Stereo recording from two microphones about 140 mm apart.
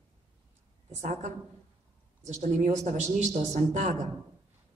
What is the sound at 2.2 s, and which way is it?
A woman's voice, 55° right (ahead or behind).